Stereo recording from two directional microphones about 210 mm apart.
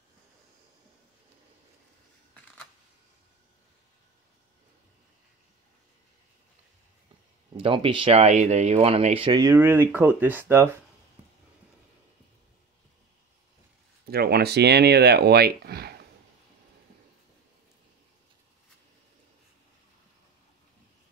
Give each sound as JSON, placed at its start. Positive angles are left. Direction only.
{"t": 7.5, "sound": "speech", "side_deg": -25}
{"t": 14.1, "sound": "speech", "side_deg": -50}